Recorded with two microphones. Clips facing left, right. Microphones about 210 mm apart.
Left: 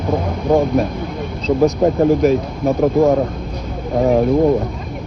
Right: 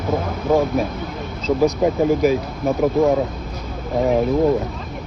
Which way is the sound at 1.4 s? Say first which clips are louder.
Left 3 dB; centre (ahead or behind).